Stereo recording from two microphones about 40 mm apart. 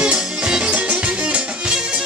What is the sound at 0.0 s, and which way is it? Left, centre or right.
Music, right.